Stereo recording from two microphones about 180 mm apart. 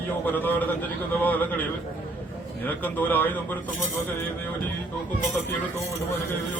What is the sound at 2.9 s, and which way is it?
Speech, 10° left (ahead or behind).